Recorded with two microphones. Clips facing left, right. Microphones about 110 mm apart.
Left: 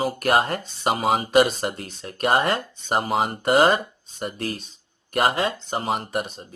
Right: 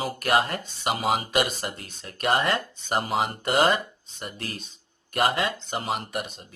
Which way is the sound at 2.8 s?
35° left (ahead or behind).